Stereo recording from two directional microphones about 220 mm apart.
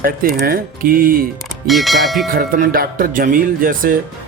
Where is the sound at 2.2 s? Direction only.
40° right (ahead or behind).